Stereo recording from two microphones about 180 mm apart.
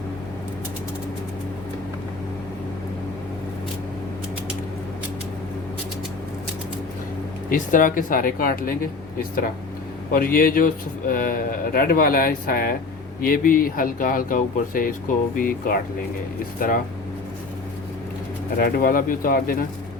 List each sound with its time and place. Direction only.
7.5 s speech: 50° left (ahead or behind)
10.1 s speech: 55° left (ahead or behind)
18.5 s speech: 55° left (ahead or behind)